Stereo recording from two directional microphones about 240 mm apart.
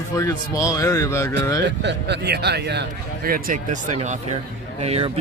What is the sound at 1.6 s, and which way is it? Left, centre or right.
Speech, right.